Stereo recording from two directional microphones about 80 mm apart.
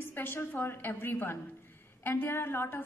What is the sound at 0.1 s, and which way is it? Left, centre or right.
A woman's voice, left.